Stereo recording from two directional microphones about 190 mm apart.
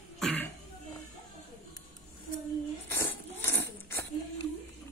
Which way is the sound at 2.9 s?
10° left (ahead or behind).